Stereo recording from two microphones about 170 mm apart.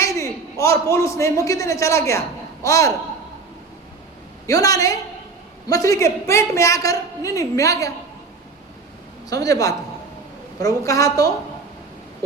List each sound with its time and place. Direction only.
0.0 s a sound: 20° left (ahead or behind)
0.6 s a man's voice: 15° left (ahead or behind)
4.4 s a woman's voice: 20° left (ahead or behind)
9.3 s a woman's voice: 20° left (ahead or behind)